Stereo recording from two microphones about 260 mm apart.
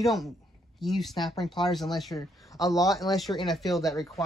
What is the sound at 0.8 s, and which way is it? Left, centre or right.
Speech, centre.